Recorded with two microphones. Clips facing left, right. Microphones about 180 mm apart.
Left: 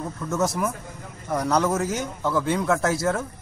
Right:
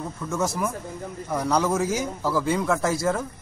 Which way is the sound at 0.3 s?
5° left (ahead or behind).